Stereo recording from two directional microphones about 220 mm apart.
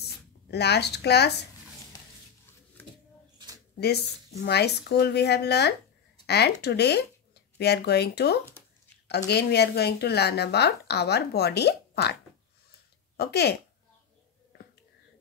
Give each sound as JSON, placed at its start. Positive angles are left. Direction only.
{"t": 0.0, "sound": "speech", "side_deg": 50}
{"t": 2.8, "sound": "a sound", "side_deg": 10}
{"t": 4.4, "sound": "a woman's voice", "side_deg": 50}
{"t": 13.2, "sound": "a woman's voice", "side_deg": 50}